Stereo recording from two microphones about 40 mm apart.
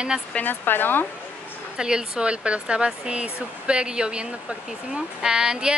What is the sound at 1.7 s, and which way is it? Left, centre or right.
Speech, right.